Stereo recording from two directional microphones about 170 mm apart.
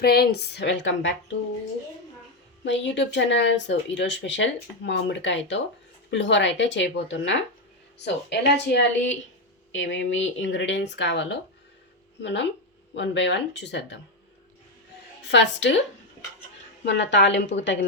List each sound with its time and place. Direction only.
0.0 s a woman's voice: 65° left (ahead or behind); by 1.4 s 90° left
2.6 s a woman's voice: 90° left
15.2 s a woman's voice: 90° left
16.8 s speech: 90° left